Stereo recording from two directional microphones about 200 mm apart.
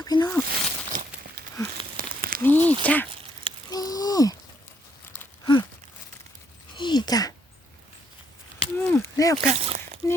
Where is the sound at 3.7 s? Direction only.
20° left (ahead or behind).